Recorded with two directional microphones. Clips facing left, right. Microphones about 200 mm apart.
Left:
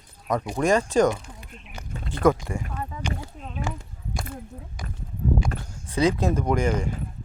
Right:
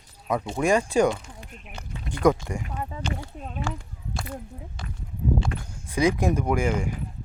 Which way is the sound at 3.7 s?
20° left (ahead or behind).